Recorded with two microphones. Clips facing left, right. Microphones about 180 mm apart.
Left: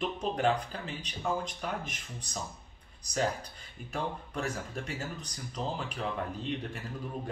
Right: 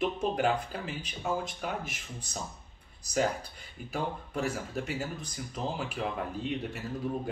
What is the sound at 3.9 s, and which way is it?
Speech, 5° right (ahead or behind).